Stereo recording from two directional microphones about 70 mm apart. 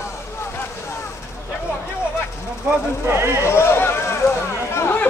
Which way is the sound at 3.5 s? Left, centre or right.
Left.